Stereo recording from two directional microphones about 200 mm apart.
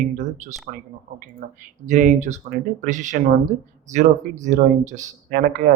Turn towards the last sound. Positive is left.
turn(degrees=-40)  # may be behind; listen again after turning